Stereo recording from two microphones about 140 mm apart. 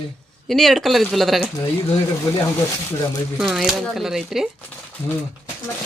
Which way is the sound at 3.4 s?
Centre (ahead or behind).